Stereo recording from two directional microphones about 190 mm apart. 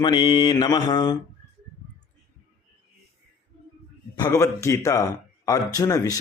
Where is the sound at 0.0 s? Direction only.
25° left (ahead or behind).